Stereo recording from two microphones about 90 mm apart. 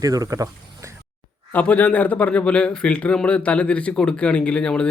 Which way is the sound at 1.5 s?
15° left (ahead or behind).